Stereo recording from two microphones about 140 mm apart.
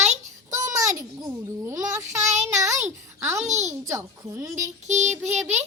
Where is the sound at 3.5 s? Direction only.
55° right (ahead or behind).